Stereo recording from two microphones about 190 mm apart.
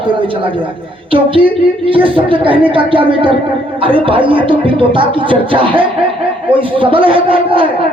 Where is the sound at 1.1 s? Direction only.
30° right (ahead or behind).